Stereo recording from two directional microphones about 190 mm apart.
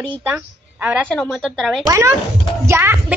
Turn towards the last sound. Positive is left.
turn(degrees=-10)  # may be behind; listen again after turning